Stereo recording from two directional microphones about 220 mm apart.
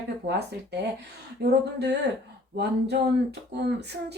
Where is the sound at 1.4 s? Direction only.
50° right (ahead or behind).